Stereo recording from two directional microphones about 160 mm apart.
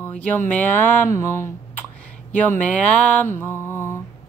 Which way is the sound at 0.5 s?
10° left (ahead or behind).